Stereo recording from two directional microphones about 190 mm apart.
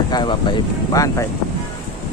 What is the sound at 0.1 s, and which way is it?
Speech, 25° left (ahead or behind).